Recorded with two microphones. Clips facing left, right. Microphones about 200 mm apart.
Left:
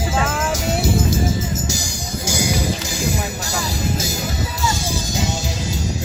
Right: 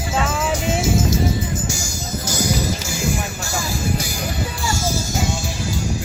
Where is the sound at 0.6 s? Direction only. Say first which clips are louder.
Even; 40° left (ahead or behind).